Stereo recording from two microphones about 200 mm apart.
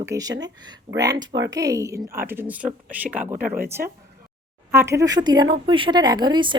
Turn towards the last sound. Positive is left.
turn(degrees=-25)  # may be behind; listen again after turning